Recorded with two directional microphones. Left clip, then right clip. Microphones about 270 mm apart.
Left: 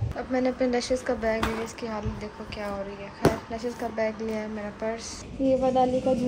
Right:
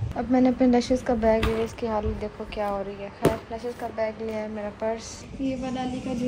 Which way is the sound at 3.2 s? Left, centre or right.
Centre.